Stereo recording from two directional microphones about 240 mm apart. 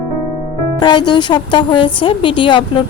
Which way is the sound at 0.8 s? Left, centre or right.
Centre.